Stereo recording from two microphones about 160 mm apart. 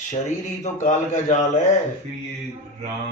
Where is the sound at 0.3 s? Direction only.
45° left (ahead or behind).